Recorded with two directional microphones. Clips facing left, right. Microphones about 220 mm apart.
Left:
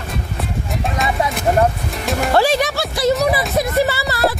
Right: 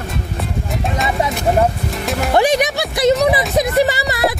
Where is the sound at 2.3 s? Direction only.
15° right (ahead or behind).